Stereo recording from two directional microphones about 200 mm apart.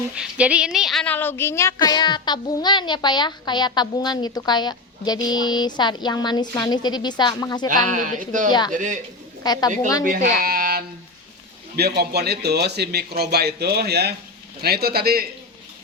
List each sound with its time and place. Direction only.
0.2 s a woman's voice: 5° right (ahead or behind); by 7.7 s 20° left (ahead or behind)
7.7 s speech: 40° right (ahead or behind)
9.4 s a woman's voice: 20° left (ahead or behind)
10.0 s speech: 45° right (ahead or behind)